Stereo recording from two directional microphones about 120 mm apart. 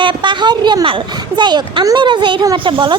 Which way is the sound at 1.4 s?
40° right (ahead or behind).